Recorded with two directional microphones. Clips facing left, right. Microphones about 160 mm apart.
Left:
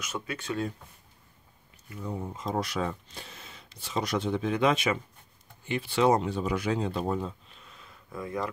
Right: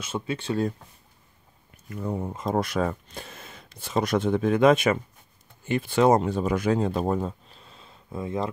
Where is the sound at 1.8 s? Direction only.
55° right (ahead or behind).